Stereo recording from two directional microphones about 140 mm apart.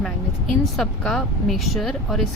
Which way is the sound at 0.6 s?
Centre (ahead or behind).